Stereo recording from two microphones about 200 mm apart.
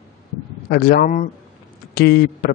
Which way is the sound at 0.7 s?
50° left (ahead or behind).